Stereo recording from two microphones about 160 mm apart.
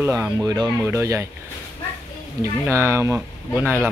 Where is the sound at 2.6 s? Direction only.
15° right (ahead or behind).